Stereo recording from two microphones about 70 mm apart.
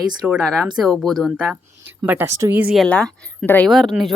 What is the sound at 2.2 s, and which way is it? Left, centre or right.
Speech, right.